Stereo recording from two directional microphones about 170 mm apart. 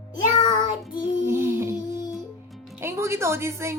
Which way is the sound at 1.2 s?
15° right (ahead or behind).